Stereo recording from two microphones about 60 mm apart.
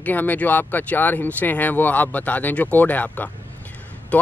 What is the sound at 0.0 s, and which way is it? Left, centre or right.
Speech, left.